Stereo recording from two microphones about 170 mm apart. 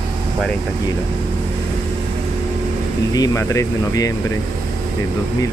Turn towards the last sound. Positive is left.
turn(degrees=20)  # may be behind; listen again after turning